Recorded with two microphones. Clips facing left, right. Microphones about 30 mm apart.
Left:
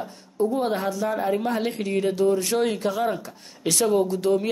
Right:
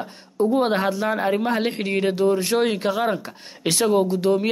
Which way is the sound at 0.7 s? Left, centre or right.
Right.